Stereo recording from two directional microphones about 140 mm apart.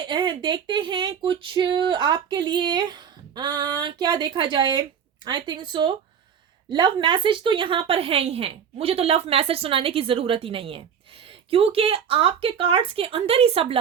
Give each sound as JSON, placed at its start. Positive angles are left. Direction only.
{"t": 0.0, "sound": "a woman's voice", "side_deg": -35}